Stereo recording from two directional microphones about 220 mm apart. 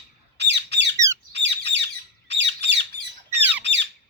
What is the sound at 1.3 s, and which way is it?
Bird, 50° right (ahead or behind).